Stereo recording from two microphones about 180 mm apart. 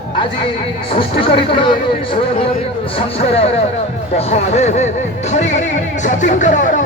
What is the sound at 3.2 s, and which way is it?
Speech, 35° left (ahead or behind).